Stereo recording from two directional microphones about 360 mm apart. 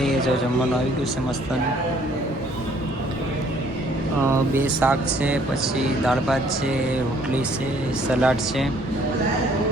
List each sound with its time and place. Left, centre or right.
4.3 s speech: centre
8.2 s speech: centre